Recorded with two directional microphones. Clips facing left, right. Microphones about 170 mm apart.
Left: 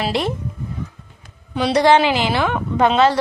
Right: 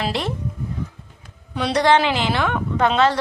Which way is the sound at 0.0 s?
10° left (ahead or behind).